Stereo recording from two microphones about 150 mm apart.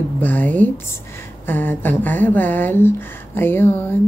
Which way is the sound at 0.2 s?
10° left (ahead or behind).